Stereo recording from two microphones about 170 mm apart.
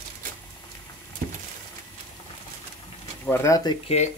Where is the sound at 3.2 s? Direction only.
15° left (ahead or behind).